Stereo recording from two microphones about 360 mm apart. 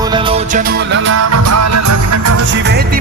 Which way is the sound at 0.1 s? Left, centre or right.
Centre.